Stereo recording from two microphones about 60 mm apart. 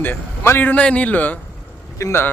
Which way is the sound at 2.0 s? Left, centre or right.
Left.